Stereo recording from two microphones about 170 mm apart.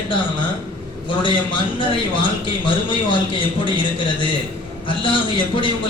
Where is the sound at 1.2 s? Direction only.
30° left (ahead or behind).